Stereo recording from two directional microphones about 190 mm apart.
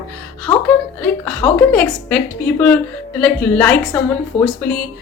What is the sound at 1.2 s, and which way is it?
Speech, 10° left (ahead or behind).